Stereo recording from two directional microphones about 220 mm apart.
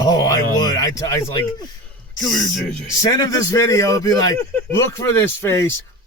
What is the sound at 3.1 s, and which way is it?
A man's voice, 15° left (ahead or behind).